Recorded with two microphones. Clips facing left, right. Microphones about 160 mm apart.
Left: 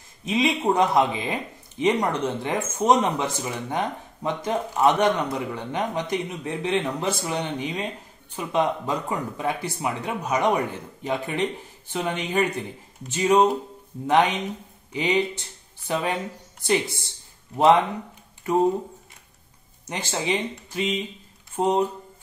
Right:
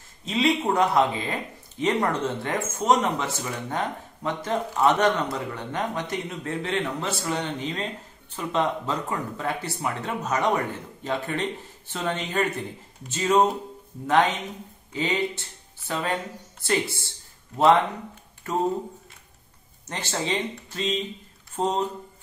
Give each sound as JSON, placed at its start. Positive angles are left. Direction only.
{"t": 0.2, "sound": "speech", "side_deg": 15}
{"t": 18.4, "sound": "speech", "side_deg": 15}
{"t": 19.9, "sound": "speech", "side_deg": 10}